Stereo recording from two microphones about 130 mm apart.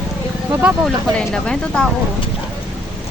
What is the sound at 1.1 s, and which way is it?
Speech, 5° left (ahead or behind).